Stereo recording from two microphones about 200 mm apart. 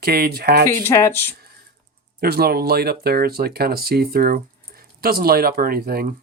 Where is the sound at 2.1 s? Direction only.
50° right (ahead or behind).